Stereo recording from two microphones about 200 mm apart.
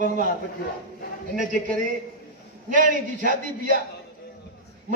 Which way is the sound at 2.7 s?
40° right (ahead or behind).